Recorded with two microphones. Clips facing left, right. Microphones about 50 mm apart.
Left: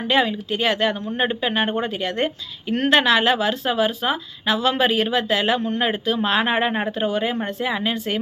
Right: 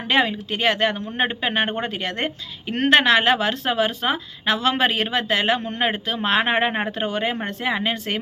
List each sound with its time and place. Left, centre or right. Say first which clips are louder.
0.1 s a woman's voice: even; right